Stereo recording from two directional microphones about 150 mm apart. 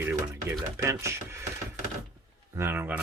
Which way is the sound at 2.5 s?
15° right (ahead or behind).